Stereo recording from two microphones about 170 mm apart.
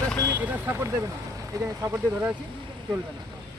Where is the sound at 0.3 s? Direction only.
10° right (ahead or behind).